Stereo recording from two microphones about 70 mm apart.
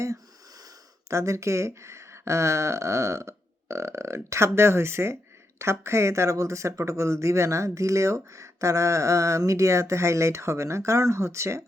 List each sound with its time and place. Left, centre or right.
1.1 s speech: right